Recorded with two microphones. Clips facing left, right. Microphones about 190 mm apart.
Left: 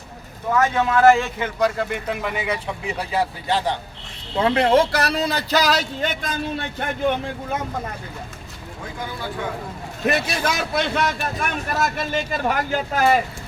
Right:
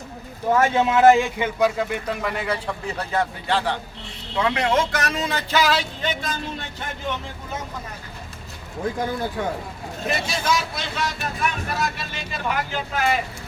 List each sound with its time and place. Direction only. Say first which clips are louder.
0.5 s a man's voice: right 1 dB; 25° right (ahead or behind)
1.5 s speech: left 1 dB; 5° right (ahead or behind); by 3.8 s 15° left (ahead or behind)
4.4 s speech: left 4 dB; 35° left (ahead or behind); by 7.6 s 55° left (ahead or behind)
10.1 s speech: left 2 dB; 65° left (ahead or behind); by 13.1 s 40° left (ahead or behind)